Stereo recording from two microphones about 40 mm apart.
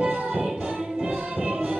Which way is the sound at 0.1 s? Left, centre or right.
Right.